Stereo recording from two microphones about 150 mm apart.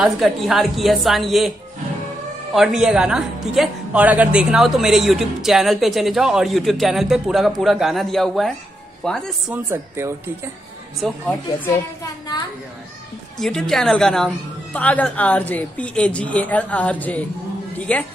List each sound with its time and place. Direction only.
0.0 s speech: centre (ahead or behind)
2.5 s speech: 5° right (ahead or behind)
9.5 s speech: 15° right (ahead or behind)
11.0 s speech: centre (ahead or behind)
13.4 s a woman's voice: 5° left (ahead or behind)